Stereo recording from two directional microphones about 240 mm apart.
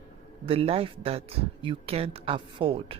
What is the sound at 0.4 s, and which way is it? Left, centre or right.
Speech, right.